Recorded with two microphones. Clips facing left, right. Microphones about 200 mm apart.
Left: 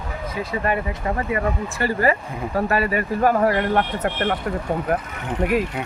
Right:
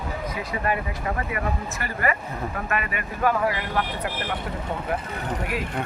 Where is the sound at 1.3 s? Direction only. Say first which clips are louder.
Left 5 dB; 30° left (ahead or behind); by 4.3 s 55° left (ahead or behind).